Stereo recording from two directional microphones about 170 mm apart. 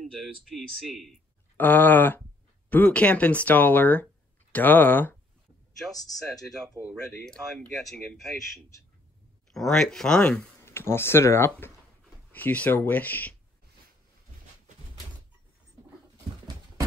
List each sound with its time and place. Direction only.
0.0 s speech: centre (ahead or behind)
1.6 s speech: 10° left (ahead or behind)
6.8 s speech: 15° left (ahead or behind)
7.2 s speech: 5° left (ahead or behind)
9.5 s speech: centre (ahead or behind)